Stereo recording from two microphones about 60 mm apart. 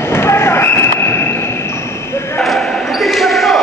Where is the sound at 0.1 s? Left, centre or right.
Left.